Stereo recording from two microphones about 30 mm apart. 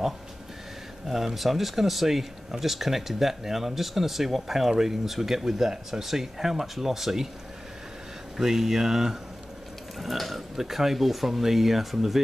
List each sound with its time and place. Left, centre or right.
1.0 s speech: centre
8.4 s speech: centre
9.9 s speech: centre